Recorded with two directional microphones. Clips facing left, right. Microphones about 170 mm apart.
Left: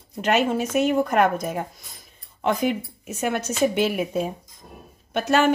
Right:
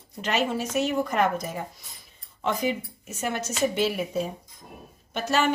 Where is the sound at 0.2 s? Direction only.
55° left (ahead or behind).